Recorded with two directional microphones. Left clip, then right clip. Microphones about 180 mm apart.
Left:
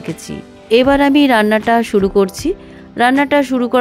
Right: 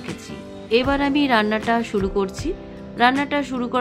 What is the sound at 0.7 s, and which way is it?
Speech, 45° left (ahead or behind).